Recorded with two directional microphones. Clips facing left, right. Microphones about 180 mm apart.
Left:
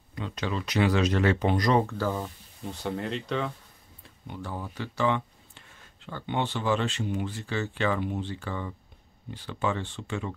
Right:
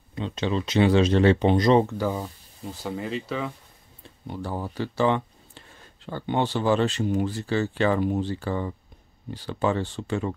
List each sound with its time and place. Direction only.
0.1 s speech: 25° right (ahead or behind)
2.6 s speech: centre (ahead or behind)
4.3 s speech: 35° right (ahead or behind)